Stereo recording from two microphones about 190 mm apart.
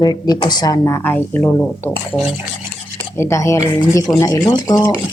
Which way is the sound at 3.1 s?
15° left (ahead or behind).